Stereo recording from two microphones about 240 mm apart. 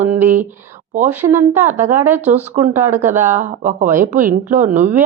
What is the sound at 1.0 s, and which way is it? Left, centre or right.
A woman's voice, centre.